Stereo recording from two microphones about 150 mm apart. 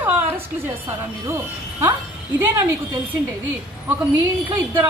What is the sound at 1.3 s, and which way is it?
Speech, 15° right (ahead or behind).